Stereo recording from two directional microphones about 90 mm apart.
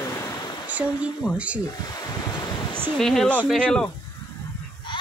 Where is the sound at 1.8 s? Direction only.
45° left (ahead or behind).